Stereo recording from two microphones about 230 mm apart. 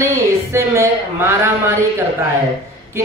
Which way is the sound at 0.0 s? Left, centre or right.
Centre.